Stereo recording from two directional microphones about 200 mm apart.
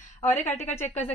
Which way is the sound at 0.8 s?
10° left (ahead or behind).